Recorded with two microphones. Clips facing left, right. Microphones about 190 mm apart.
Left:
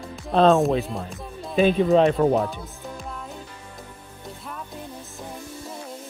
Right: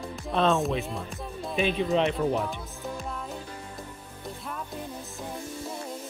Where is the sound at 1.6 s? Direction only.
40° left (ahead or behind).